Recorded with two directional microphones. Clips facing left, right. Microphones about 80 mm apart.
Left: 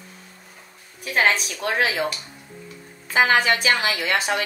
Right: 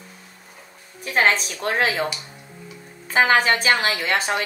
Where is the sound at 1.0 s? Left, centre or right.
Right.